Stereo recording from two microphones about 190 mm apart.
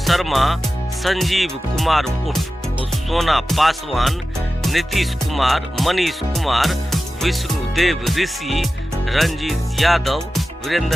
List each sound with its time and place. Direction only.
0.0 s speech: centre (ahead or behind)